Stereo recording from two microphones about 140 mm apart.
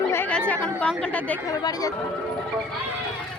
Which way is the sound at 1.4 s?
25° left (ahead or behind).